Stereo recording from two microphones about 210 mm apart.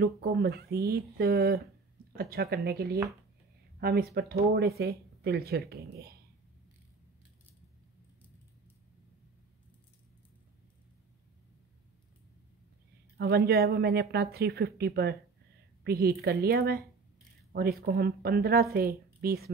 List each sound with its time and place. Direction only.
0.0 s speech: 50° right (ahead or behind)
13.5 s speech: 50° right (ahead or behind)
19.0 s a sound: 45° right (ahead or behind)